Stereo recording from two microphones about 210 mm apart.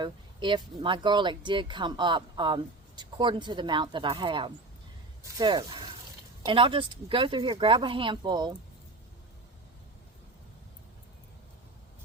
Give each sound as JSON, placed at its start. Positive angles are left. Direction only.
{"t": 0.0, "sound": "speech", "side_deg": -20}